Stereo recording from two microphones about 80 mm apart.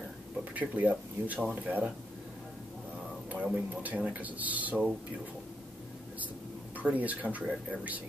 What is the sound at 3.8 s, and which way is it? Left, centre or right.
Speech, centre.